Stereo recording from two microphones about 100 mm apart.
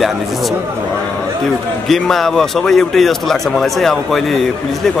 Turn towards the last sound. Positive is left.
turn(degrees=5)  # may be behind; listen again after turning